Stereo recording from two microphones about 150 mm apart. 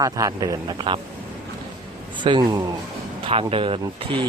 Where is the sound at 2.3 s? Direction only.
30° right (ahead or behind).